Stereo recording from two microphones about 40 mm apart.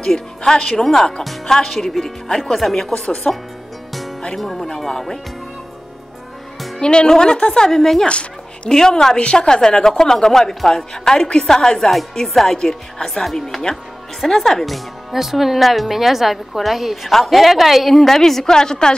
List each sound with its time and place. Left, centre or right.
0.0 s a woman's voice: centre
4.4 s a woman's voice: centre
6.8 s a woman's voice: left
8.1 s a sound: left
8.7 s a woman's voice: centre